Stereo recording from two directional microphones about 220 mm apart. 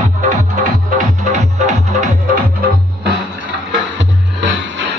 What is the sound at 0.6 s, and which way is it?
Music, 35° right (ahead or behind).